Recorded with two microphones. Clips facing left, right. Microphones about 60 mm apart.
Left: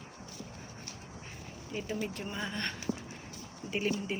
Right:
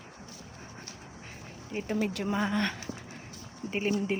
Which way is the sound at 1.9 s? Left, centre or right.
Right.